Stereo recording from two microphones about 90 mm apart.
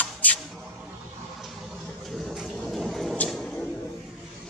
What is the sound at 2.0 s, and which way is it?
Vehicle, centre (ahead or behind).